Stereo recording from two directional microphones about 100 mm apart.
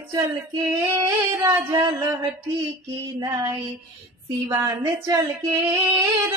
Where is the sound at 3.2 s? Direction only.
35° right (ahead or behind).